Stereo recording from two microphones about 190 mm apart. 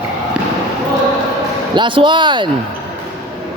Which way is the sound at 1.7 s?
25° right (ahead or behind).